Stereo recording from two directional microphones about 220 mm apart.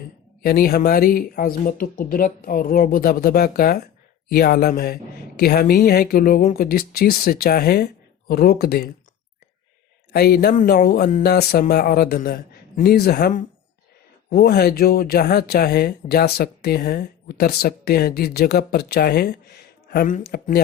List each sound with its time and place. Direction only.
0.4 s speech: 45° left (ahead or behind)
10.1 s speech: 45° left (ahead or behind)